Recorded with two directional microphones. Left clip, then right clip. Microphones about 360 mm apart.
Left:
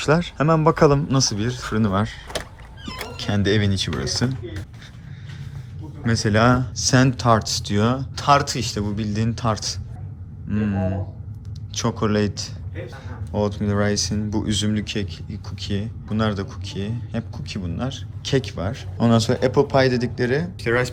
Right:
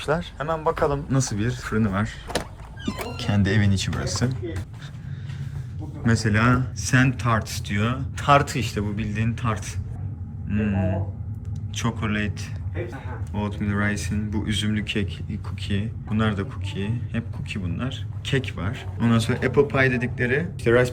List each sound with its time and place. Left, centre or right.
0.0 s speech: left
1.1 s speech: centre
3.2 s speech: centre
6.1 s speech: centre
12.1 s speech: centre